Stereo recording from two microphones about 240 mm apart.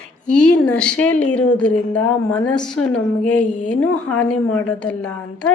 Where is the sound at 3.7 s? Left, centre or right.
Centre.